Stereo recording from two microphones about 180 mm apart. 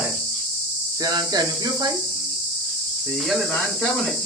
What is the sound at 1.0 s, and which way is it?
Speech, 20° right (ahead or behind).